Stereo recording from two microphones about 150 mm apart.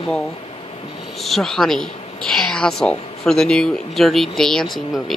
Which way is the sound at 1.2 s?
Centre (ahead or behind).